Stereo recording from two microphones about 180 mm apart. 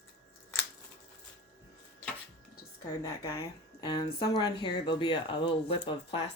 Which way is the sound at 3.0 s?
20° left (ahead or behind).